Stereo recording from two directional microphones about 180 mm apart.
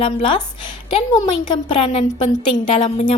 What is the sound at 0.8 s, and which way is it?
A woman's voice, 25° left (ahead or behind).